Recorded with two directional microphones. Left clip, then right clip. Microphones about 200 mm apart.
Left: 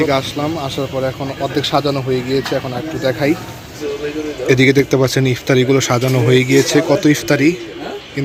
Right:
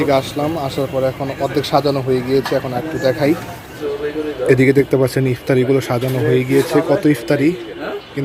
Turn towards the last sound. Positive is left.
turn(degrees=0)  # may be behind; listen again after turning